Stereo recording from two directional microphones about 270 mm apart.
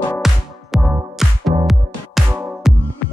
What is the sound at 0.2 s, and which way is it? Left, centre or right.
Music, centre.